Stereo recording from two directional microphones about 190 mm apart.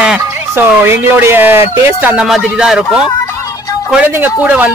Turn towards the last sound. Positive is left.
turn(degrees=-10)  # may be behind; listen again after turning